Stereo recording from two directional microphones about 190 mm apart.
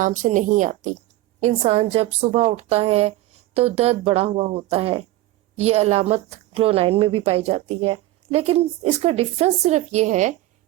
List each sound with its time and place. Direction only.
0.0 s a woman's voice: 40° right (ahead or behind)